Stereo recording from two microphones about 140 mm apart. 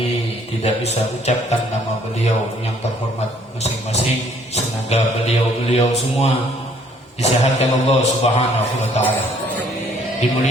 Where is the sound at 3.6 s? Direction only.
50° left (ahead or behind).